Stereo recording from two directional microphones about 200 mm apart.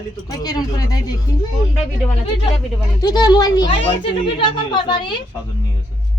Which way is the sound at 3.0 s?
20° left (ahead or behind).